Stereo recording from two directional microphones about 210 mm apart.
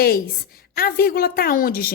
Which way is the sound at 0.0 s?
45° left (ahead or behind).